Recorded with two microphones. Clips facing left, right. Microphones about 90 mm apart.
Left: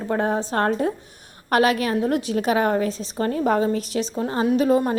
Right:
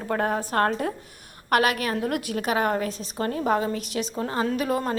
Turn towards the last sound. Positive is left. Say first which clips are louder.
# left 6 dB
turn(degrees=25)  # may be behind; listen again after turning